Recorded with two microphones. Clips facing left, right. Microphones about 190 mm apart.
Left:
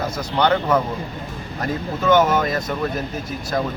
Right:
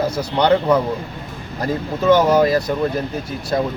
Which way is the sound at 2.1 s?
35° right (ahead or behind).